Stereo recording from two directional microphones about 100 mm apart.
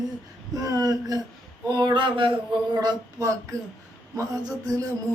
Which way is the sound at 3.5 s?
35° right (ahead or behind).